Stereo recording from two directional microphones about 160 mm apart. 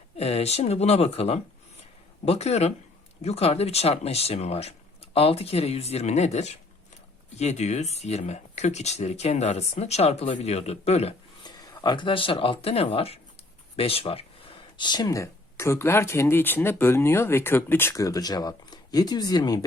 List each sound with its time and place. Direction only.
0.2 s speech: 40° left (ahead or behind)
11.4 s speech: 30° left (ahead or behind)
14.8 s speech: 25° left (ahead or behind)